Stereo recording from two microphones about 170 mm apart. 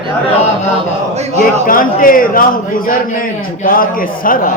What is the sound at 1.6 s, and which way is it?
A man's voice, 55° left (ahead or behind).